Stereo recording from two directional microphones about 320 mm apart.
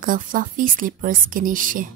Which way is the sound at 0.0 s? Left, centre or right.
Right.